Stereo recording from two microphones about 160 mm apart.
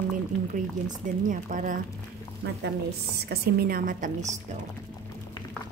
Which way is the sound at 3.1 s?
80° right.